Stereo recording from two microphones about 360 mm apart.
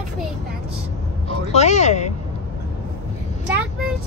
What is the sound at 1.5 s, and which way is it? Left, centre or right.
Speech, centre.